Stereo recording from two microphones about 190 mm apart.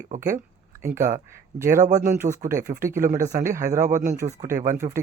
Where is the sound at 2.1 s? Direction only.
15° right (ahead or behind).